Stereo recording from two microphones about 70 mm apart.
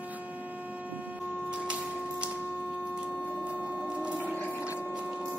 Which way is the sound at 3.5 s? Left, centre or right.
Centre.